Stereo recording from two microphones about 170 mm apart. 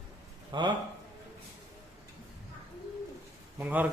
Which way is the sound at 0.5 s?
25° right (ahead or behind).